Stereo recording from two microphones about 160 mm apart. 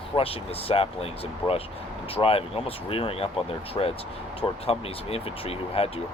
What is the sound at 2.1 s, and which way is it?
Speech, 35° left (ahead or behind).